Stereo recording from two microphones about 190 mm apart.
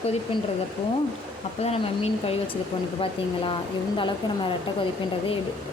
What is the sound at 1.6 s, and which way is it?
Speech, 30° left (ahead or behind).